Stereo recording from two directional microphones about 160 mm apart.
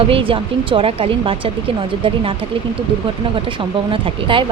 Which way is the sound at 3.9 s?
30° right (ahead or behind).